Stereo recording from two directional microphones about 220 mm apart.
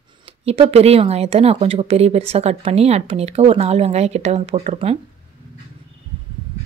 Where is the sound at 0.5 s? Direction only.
30° right (ahead or behind).